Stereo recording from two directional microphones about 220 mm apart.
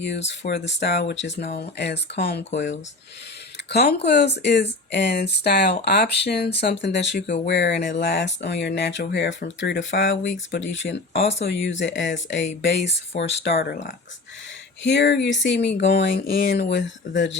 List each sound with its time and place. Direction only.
0.0 s speech: 50° left (ahead or behind)
11.1 s speech: 30° left (ahead or behind)
11.6 s speech: 55° left (ahead or behind)
14.8 s speech: 50° left (ahead or behind)